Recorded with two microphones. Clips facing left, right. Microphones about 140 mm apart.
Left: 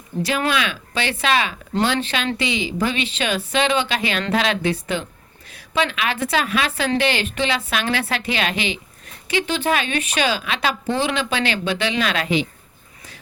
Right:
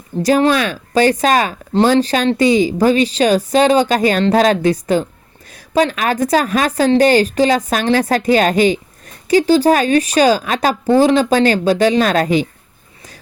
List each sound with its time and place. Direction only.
0.2 s a woman's voice: 40° right (ahead or behind)